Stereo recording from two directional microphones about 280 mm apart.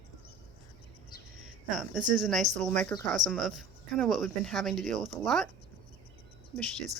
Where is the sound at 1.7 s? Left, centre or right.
Centre.